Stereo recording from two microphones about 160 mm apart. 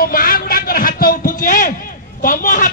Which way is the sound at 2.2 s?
60° left (ahead or behind).